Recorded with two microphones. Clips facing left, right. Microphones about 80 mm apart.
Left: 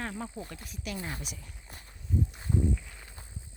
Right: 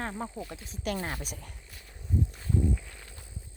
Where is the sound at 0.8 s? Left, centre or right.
Right.